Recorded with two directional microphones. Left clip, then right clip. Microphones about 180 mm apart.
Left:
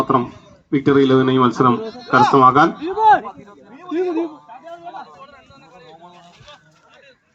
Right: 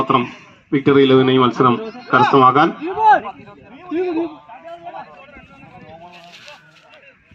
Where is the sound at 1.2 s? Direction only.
50° right (ahead or behind).